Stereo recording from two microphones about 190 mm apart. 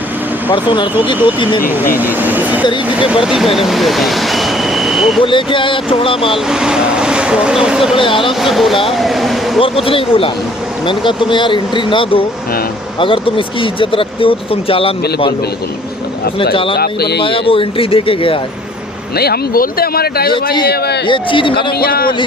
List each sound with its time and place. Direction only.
1.0 s speech: 25° left (ahead or behind)
2.0 s speech: 10° right (ahead or behind)
5.2 s speech: 25° left (ahead or behind)
6.5 s speech: 5° right (ahead or behind)
7.9 s speech: 25° left (ahead or behind)
8.3 s speech: centre (ahead or behind)
9.6 s speech: 30° left (ahead or behind)
16.7 s speech: 55° left (ahead or behind)
17.2 s speech: 30° left (ahead or behind)
19.1 s speech: 55° left (ahead or behind)
21.1 s speech: 25° left (ahead or behind)
21.7 s speech: 55° left (ahead or behind)